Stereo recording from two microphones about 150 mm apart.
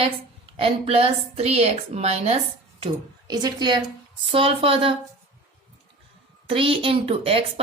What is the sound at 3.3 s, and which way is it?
A woman's voice, 30° right (ahead or behind).